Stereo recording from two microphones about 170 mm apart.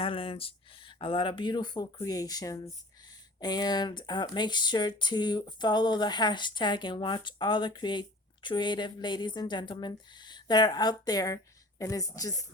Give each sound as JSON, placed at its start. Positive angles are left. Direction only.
{"t": 0.0, "sound": "speech", "side_deg": 35}